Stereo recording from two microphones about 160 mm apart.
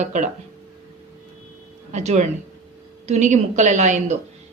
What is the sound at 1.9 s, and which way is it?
Speech, 45° right (ahead or behind).